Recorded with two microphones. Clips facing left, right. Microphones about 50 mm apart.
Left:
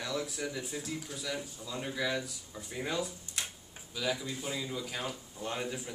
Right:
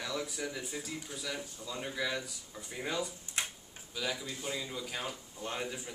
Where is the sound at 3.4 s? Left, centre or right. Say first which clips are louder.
Right 2 dB; right.